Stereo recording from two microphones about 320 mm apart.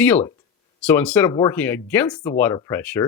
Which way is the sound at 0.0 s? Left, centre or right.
Centre.